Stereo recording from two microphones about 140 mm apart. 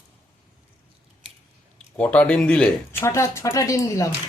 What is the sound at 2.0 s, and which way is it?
Speech, 10° left (ahead or behind).